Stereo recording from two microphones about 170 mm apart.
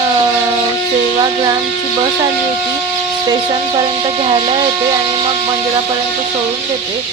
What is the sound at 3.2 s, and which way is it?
Speech, 25° right (ahead or behind).